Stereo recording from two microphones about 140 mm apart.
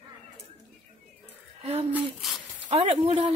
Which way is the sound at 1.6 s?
50° right (ahead or behind).